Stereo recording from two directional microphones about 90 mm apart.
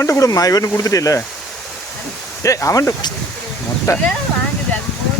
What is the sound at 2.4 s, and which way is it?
Speech, 35° left (ahead or behind).